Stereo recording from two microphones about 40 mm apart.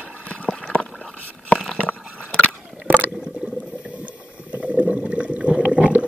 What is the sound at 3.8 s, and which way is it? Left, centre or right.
Boat, right.